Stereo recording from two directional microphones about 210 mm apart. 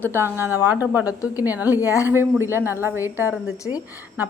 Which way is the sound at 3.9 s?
10° right (ahead or behind).